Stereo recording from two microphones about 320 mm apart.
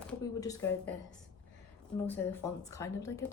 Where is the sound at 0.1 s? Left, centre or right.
Centre.